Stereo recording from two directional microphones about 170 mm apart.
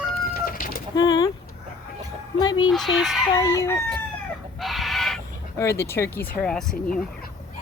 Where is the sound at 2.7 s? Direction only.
Centre (ahead or behind).